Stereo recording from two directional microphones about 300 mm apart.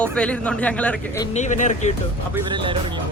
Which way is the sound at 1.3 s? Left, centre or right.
Left.